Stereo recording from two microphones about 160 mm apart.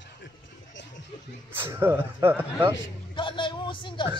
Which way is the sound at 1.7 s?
15° right (ahead or behind).